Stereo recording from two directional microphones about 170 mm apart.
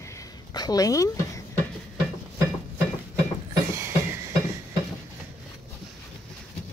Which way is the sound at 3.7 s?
15° right (ahead or behind).